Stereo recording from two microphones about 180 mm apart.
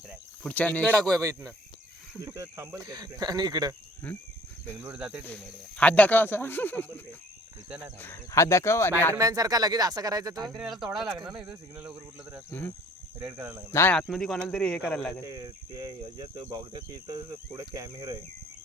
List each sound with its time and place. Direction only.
0.4 s speech: 10° left (ahead or behind)
1.1 s speech: 20° right (ahead or behind)
2.2 s cricket: 15° right (ahead or behind)
4.1 s speech: 10° left (ahead or behind)
4.7 s speech: 10° right (ahead or behind)
5.2 s speech: 5° left (ahead or behind)
9.1 s cricket: 20° right (ahead or behind)
10.5 s speech: centre (ahead or behind)
12.5 s speech: 10° left (ahead or behind)
13.3 s speech: 10° right (ahead or behind)
13.7 s speech: 10° left (ahead or behind)
14.1 s speech: centre (ahead or behind)
15.3 s cricket: 20° right (ahead or behind)